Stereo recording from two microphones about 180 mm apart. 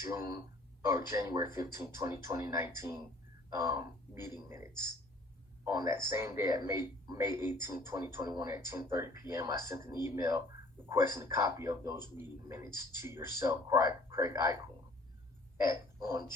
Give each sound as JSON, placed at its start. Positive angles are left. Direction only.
{"t": 0.0, "sound": "a man's voice", "side_deg": -15}